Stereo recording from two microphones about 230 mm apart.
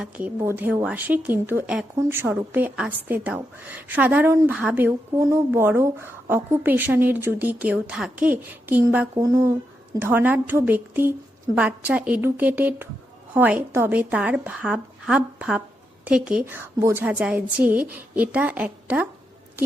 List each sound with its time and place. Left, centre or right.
0.0 s a woman's voice: centre